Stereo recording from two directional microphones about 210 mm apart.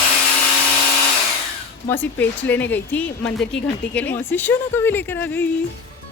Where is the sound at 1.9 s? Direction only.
10° left (ahead or behind).